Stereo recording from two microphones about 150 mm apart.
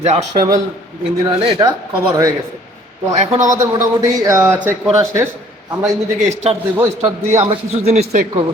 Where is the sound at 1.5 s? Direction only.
25° right (ahead or behind).